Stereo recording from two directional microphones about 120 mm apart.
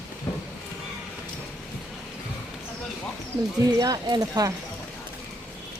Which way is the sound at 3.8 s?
30° right (ahead or behind).